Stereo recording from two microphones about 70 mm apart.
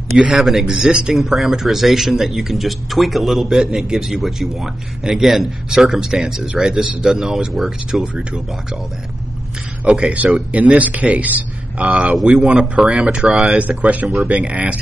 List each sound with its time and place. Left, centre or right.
0.1 s speech: centre
8.0 s speech: centre
9.9 s speech: centre
13.6 s speech: right